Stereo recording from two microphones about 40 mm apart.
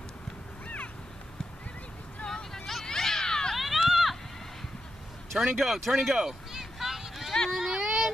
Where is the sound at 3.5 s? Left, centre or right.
Centre.